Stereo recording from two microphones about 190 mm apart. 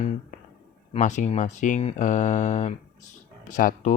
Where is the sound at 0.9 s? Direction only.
40° left (ahead or behind).